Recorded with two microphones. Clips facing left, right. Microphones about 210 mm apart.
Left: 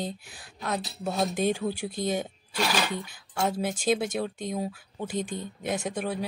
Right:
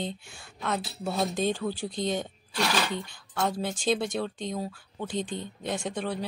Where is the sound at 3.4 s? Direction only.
5° left (ahead or behind).